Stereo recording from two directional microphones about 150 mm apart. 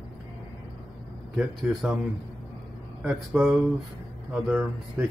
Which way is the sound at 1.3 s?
Centre (ahead or behind).